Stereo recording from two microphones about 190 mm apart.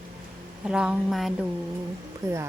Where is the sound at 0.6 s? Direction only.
5° right (ahead or behind).